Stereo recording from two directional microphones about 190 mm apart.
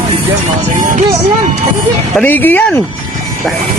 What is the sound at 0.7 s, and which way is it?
Speech, 45° right (ahead or behind).